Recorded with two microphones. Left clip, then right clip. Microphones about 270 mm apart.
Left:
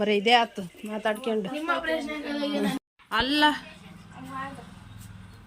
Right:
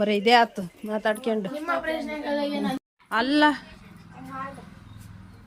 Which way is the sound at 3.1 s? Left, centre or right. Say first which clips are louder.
Right 2 dB; centre.